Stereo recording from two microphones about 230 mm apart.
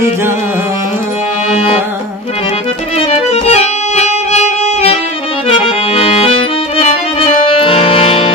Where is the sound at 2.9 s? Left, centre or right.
Left.